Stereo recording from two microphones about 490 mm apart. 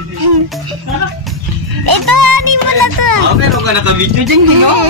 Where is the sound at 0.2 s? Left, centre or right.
Right.